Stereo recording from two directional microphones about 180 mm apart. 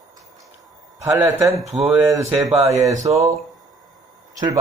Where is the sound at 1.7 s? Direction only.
30° right (ahead or behind).